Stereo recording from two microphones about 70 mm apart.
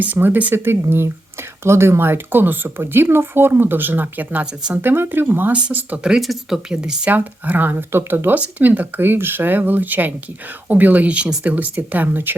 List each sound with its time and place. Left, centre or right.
0.0 s speech: right
6.0 s speech: centre
7.1 s speech: right